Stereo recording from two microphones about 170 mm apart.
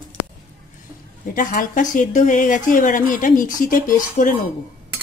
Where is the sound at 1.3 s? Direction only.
55° left (ahead or behind).